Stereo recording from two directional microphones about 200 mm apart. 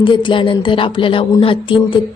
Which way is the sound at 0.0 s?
25° left (ahead or behind).